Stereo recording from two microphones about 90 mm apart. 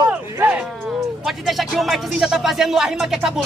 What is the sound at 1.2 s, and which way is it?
Speech, centre (ahead or behind).